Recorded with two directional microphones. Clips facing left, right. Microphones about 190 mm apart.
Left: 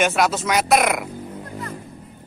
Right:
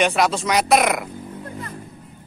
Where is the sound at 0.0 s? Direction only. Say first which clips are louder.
Even; centre (ahead or behind).